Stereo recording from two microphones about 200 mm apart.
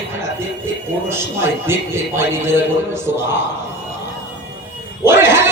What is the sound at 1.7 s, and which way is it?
Speech, 10° right (ahead or behind).